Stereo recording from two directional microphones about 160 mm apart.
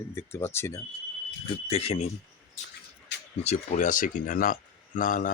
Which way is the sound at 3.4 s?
45° left (ahead or behind).